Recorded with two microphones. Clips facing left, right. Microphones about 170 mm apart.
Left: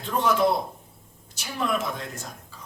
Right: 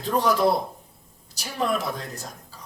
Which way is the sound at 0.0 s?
35° right (ahead or behind).